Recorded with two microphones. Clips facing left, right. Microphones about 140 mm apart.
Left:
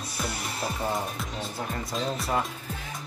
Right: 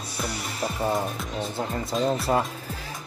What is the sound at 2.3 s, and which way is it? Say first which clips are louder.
Speech: right 3 dB; 30° right (ahead or behind).